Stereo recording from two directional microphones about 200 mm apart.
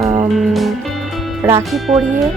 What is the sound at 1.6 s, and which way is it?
Speech, centre (ahead or behind).